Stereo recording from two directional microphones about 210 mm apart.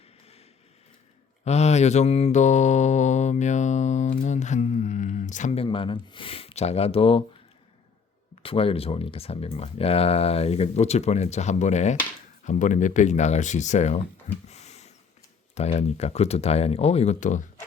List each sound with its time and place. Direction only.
1.5 s mantra: 30° left (ahead or behind)
8.4 s speech: 25° left (ahead or behind)
14.4 s a sound: 30° left (ahead or behind)
15.5 s speech: 30° left (ahead or behind)